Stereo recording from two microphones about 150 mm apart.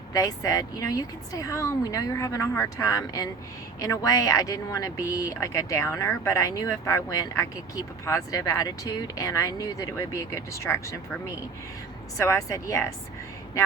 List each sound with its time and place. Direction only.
0.1 s speech: 25° left (ahead or behind)
12.2 s speech: 20° left (ahead or behind)